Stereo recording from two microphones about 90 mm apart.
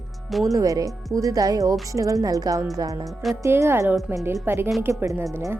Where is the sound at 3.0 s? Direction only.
Centre (ahead or behind).